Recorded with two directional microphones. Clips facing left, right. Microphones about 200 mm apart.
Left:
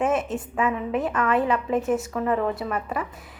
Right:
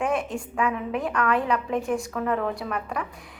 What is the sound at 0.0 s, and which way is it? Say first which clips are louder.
A woman's voice: left 2 dB; 5° left (ahead or behind).